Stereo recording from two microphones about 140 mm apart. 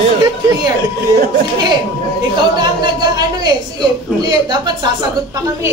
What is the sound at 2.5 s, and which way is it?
Speech, 30° right (ahead or behind).